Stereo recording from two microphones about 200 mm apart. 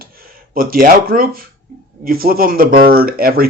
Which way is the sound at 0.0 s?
45° right (ahead or behind).